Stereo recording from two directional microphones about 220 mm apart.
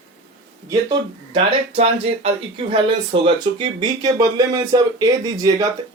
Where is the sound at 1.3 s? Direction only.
25° right (ahead or behind).